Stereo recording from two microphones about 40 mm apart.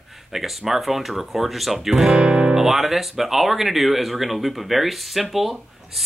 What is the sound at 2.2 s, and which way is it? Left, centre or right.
Guitar, right.